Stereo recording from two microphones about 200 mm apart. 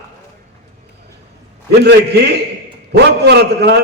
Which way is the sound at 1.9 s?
55° right (ahead or behind).